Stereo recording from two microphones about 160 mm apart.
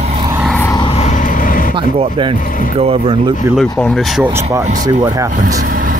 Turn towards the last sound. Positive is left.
turn(degrees=-65)  # may be behind; listen again after turning